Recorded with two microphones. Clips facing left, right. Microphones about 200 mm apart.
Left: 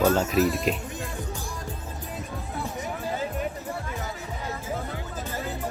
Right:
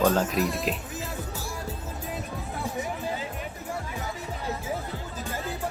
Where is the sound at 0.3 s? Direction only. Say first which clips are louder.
Left 4 dB; centre (ahead or behind).